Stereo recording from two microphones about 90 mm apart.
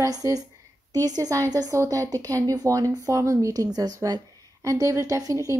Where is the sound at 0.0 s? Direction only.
40° right (ahead or behind).